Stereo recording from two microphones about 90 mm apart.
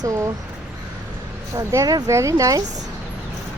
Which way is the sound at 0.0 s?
35° right (ahead or behind).